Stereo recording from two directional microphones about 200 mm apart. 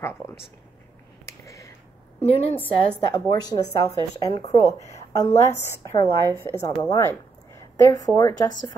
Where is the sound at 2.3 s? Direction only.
30° left (ahead or behind).